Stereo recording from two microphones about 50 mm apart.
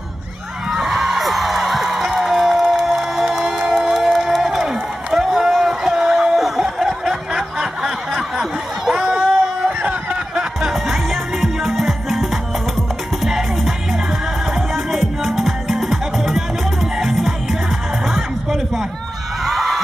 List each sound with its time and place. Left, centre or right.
0.7 s music: centre
3.7 s crowd: centre
6.3 s snicker: centre
9.8 s a sound: right
10.1 s music: centre
11.1 s music: centre
18.0 s a sound: centre